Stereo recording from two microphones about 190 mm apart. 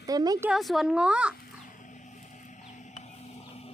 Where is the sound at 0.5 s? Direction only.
Centre (ahead or behind).